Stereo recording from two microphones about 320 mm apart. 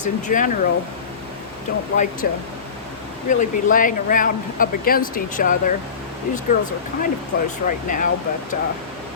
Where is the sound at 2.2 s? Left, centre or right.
Left.